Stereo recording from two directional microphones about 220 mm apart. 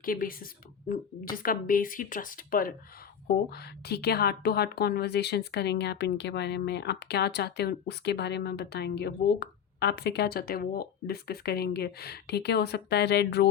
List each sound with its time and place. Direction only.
0.0 s a woman's voice: 40° left (ahead or behind)